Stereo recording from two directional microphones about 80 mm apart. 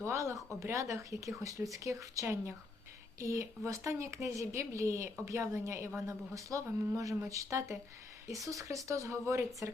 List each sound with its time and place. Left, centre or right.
0.0 s speech: right